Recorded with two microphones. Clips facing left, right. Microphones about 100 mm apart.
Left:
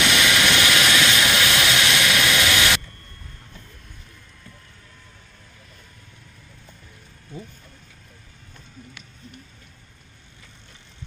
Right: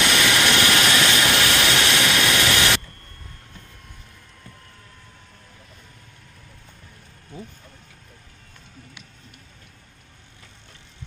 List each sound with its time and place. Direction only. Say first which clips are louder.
0.1 s vehicle: even; 35° right (ahead or behind)